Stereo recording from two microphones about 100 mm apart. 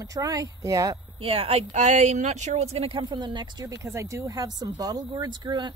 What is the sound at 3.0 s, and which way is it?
Speech, 50° right (ahead or behind).